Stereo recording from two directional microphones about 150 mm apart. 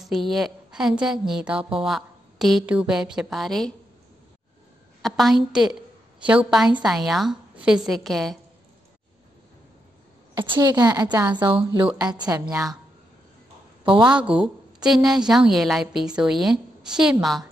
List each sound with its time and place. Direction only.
0.0 s a woman's voice: centre (ahead or behind)
5.0 s a woman's voice: centre (ahead or behind)
10.3 s a woman's voice: 30° right (ahead or behind)
14.0 s a woman's voice: 5° right (ahead or behind)